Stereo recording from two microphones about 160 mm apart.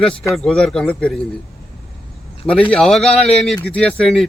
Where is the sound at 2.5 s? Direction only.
10° left (ahead or behind).